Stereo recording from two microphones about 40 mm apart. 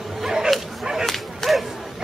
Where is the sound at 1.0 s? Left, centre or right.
Centre.